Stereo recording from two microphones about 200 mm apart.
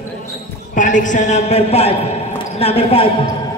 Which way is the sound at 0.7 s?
40° left (ahead or behind).